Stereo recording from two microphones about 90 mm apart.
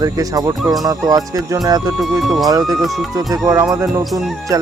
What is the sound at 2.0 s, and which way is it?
Speech, centre (ahead or behind).